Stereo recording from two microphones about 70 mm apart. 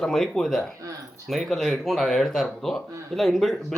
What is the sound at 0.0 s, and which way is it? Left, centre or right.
Speech, centre.